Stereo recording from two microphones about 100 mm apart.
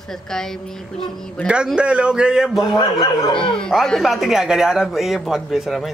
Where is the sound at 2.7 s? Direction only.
45° left (ahead or behind).